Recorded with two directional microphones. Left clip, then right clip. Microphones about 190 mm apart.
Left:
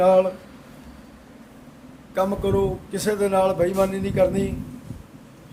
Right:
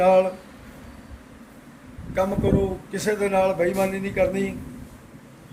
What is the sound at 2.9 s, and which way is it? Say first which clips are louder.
A man's voice: left 1 dB; 25° left (ahead or behind).